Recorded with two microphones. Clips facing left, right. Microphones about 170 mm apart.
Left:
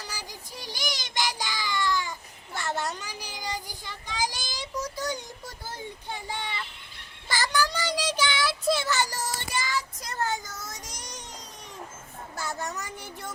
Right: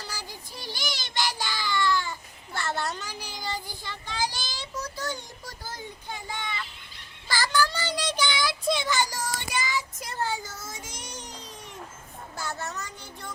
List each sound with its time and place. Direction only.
0.0 s child singing: 15° left (ahead or behind)
5.6 s a sound: 30° left (ahead or behind)
7.3 s child singing: 20° left (ahead or behind); by 8.9 s 5° left (ahead or behind)
8.9 s child singing: 10° right (ahead or behind)
9.2 s child singing: centre (ahead or behind)
12.4 s child singing: 10° left (ahead or behind)